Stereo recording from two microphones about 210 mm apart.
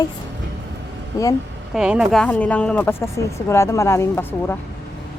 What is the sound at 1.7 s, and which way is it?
Speech, 5° right (ahead or behind).